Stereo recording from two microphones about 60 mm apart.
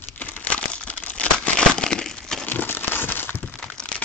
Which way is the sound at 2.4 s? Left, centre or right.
Left.